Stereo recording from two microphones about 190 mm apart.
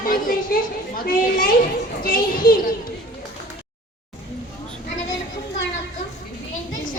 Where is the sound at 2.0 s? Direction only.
50° left (ahead or behind).